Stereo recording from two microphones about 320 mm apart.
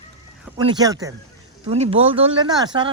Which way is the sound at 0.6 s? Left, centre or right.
Centre.